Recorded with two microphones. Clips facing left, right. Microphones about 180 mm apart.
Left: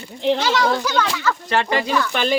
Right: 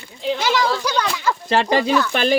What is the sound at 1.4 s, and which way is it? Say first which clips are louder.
Speech: right 4 dB; 25° right (ahead or behind).